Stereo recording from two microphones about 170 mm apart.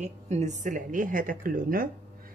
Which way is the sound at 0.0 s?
40° right (ahead or behind).